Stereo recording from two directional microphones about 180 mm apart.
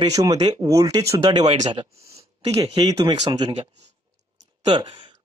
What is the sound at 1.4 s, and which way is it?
Speech, 40° right (ahead or behind).